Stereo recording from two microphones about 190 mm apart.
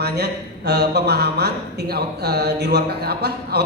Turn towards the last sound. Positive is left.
turn(degrees=-60)  # may be behind; listen again after turning